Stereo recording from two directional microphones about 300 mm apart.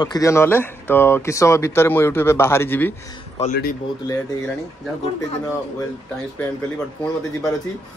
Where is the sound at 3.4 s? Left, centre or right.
Left.